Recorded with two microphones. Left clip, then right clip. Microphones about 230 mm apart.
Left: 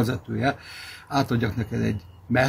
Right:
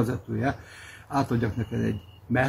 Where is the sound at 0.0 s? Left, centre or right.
Centre.